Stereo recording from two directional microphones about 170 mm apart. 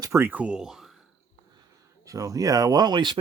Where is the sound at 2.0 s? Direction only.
20° right (ahead or behind).